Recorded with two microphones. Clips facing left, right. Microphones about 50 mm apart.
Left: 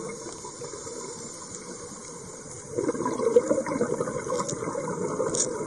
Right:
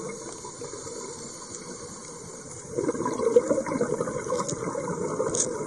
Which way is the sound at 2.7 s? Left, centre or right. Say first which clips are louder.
Even; centre.